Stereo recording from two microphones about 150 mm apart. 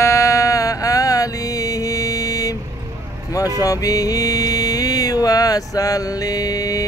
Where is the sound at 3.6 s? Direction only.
25° left (ahead or behind).